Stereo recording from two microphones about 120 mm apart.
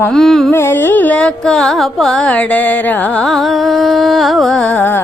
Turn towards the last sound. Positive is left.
turn(degrees=15)  # may be behind; listen again after turning